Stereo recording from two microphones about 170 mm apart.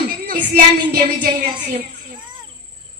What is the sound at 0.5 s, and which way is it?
Music, 65° right (ahead or behind).